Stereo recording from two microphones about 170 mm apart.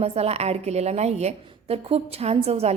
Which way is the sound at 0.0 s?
35° right (ahead or behind).